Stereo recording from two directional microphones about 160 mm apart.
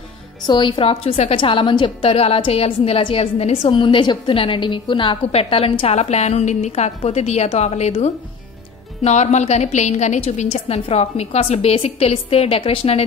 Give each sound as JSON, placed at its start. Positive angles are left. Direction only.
{"t": 0.5, "sound": "a woman's voice", "side_deg": 30}